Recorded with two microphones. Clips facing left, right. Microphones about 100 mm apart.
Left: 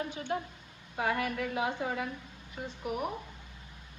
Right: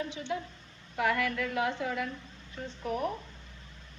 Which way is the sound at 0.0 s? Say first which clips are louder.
Even; 45° left (ahead or behind).